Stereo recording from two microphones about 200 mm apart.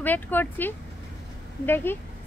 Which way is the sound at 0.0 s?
10° left (ahead or behind).